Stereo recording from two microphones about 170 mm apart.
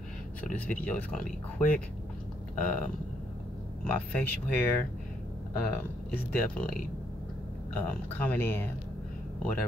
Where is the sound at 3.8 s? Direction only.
10° left (ahead or behind).